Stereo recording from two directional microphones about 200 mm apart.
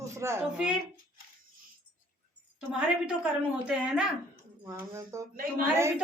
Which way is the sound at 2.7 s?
5° right (ahead or behind).